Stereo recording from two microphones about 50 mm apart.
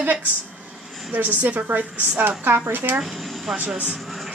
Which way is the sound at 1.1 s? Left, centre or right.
Right.